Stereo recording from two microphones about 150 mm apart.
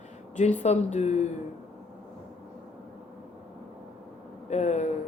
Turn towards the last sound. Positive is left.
turn(degrees=50)  # may be behind; listen again after turning